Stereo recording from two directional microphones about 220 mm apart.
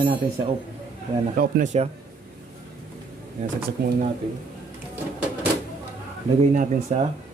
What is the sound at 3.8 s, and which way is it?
Speech, 45° right (ahead or behind).